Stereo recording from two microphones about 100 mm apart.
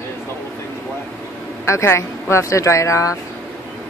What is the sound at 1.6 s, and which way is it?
Speech, 25° left (ahead or behind).